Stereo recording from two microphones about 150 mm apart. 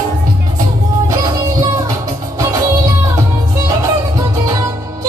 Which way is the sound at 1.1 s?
25° right (ahead or behind).